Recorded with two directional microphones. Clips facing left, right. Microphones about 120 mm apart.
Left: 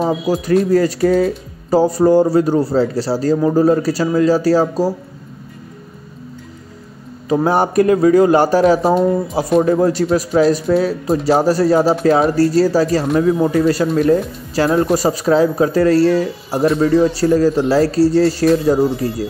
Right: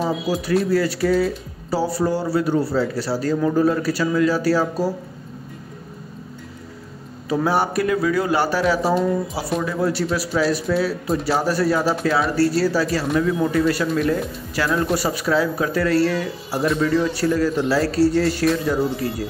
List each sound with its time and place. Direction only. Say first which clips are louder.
0.3 s speech: left 6 dB; 40° left (ahead or behind)
7.2 s speech: left 5 dB; 40° left (ahead or behind)